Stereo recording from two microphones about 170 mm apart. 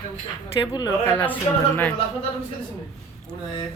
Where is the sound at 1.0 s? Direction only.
10° left (ahead or behind).